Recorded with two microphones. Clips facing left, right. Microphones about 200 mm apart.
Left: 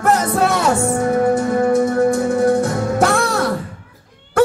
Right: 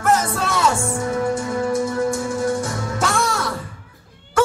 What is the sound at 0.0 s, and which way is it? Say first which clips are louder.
Music: left 4 dB; 60° left (ahead or behind).